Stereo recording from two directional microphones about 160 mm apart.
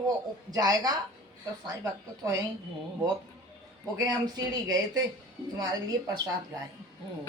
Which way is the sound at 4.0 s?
25° right (ahead or behind).